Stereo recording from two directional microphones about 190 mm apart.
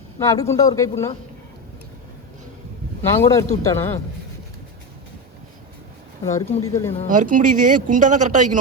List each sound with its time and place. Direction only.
0.2 s speech: 15° left (ahead or behind)
3.0 s speech: 15° left (ahead or behind)
6.2 s speech: 15° left (ahead or behind)
7.1 s speech: 45° right (ahead or behind)